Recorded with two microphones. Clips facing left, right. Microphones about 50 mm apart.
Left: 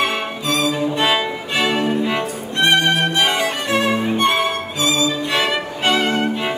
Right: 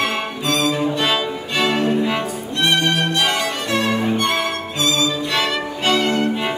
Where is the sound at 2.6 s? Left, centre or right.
Left.